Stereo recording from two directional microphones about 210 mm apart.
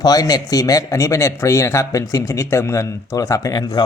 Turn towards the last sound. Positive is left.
turn(degrees=20)  # may be behind; listen again after turning